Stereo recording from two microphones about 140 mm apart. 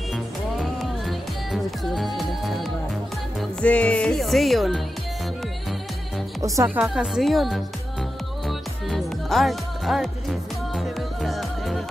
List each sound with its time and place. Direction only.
0.1 s music: centre (ahead or behind)
3.6 s speech: 10° left (ahead or behind)
6.4 s speech: 20° right (ahead or behind)
6.8 s speech: 5° right (ahead or behind)
8.5 s music: centre (ahead or behind)